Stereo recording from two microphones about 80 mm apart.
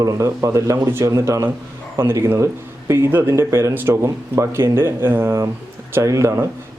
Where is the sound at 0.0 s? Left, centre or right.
Right.